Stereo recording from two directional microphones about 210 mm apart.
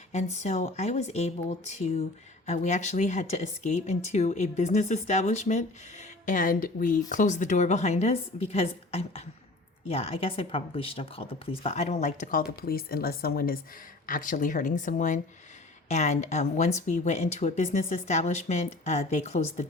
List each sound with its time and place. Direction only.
0.1 s speech: 30° left (ahead or behind)